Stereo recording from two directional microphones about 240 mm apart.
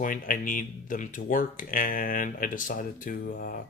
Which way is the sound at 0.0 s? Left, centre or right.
Left.